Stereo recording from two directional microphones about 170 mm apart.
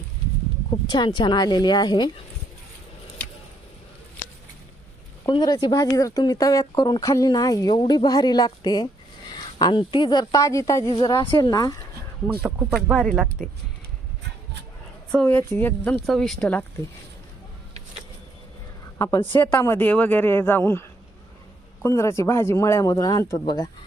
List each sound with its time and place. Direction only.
0.7 s speech: 25° left (ahead or behind)
5.3 s speech: 25° left (ahead or behind)
12.4 s speech: 10° right (ahead or behind)
12.7 s speech: centre (ahead or behind)
15.1 s speech: 10° left (ahead or behind)
18.9 s a woman's voice: 20° left (ahead or behind)
21.8 s speech: 15° left (ahead or behind)